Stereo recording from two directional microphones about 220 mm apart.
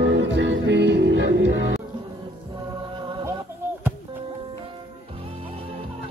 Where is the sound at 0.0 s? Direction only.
55° right (ahead or behind).